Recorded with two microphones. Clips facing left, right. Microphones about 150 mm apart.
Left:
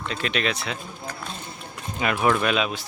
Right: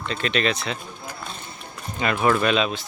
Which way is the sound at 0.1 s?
5° left (ahead or behind).